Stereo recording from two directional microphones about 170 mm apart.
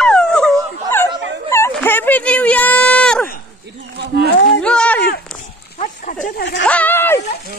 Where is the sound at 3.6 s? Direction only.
80° right.